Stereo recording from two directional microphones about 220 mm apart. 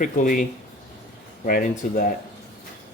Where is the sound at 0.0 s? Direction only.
35° left (ahead or behind).